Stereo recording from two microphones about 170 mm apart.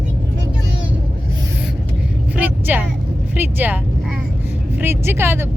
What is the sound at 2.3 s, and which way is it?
Vehicle, 10° right (ahead or behind).